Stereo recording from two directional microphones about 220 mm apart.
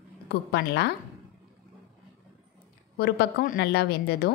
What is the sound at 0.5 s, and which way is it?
Speech, 50° left (ahead or behind).